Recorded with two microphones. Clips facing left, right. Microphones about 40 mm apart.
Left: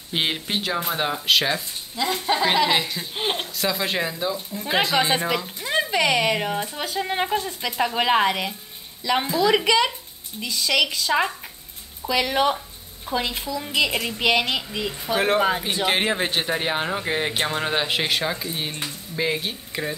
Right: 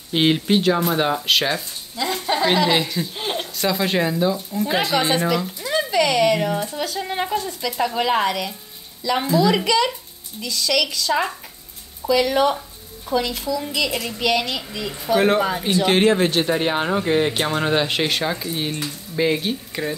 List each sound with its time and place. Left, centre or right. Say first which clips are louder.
0.1 s speech: right 7 dB; centre
3.2 s a sound: left 4 dB; left
3.5 s speech: right 8 dB; centre
4.9 s a woman's voice: right 2 dB; left
9.3 s speech: right 3 dB; centre
9.7 s a woman's voice: right 1 dB; left
15.1 s speech: right 2 dB; centre